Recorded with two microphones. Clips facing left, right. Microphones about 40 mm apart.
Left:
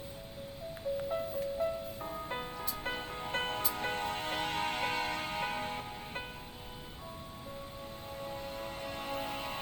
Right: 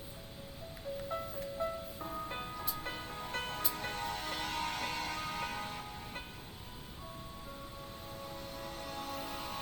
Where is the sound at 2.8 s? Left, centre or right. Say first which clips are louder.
Left 4 dB; left.